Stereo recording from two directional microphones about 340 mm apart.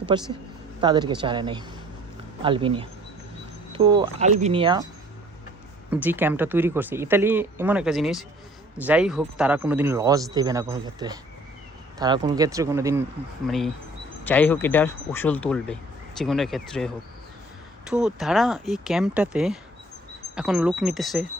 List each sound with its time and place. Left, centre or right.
0.1 s speech: centre
5.9 s speech: centre